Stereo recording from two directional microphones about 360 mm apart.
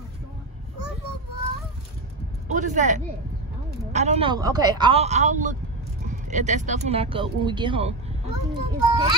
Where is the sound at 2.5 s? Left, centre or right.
Centre.